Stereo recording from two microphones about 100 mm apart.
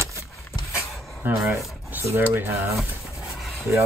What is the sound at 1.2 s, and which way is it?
Speech, 20° right (ahead or behind).